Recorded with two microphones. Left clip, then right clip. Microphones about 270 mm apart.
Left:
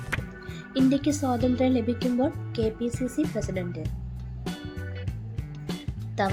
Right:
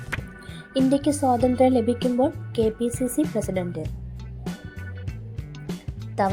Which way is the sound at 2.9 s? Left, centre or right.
Centre.